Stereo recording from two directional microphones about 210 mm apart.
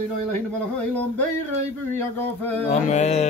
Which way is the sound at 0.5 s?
5° left (ahead or behind).